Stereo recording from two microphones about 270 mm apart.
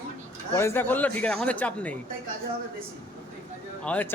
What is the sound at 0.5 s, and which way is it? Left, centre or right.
A man's voice, centre.